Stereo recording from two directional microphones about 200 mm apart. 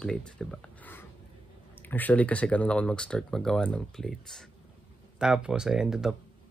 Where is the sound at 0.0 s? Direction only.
5° left (ahead or behind).